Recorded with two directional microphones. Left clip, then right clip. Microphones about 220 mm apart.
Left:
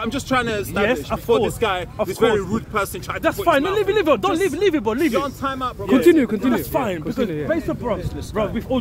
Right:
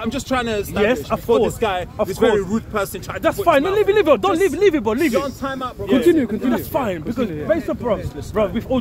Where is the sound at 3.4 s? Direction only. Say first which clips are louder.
Right 3 dB; 20° left (ahead or behind).